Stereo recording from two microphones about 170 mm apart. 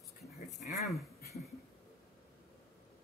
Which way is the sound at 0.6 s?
45° left (ahead or behind).